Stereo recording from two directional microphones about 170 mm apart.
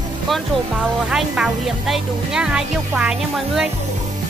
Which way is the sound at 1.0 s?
5° right (ahead or behind).